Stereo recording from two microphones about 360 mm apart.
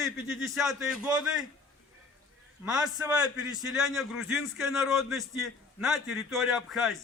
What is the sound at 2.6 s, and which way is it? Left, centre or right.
A man's voice, centre.